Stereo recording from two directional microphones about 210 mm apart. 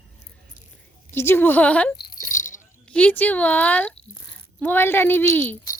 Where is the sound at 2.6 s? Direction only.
5° left (ahead or behind).